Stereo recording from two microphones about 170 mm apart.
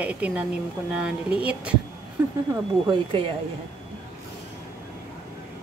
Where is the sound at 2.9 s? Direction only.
30° right (ahead or behind).